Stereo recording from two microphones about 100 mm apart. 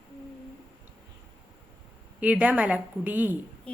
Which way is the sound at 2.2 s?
15° right (ahead or behind).